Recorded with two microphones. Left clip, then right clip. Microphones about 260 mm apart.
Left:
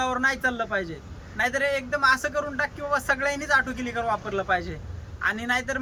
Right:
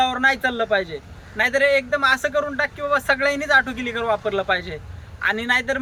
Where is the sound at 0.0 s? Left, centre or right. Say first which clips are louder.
Right 5 dB; centre.